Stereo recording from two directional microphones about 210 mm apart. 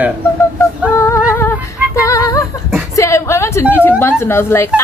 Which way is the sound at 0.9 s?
15° left (ahead or behind).